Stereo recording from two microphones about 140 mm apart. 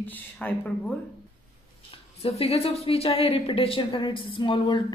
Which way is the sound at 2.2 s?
45° left (ahead or behind).